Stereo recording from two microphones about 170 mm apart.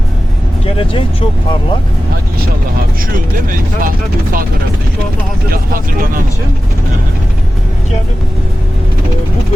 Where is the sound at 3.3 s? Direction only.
55° right (ahead or behind).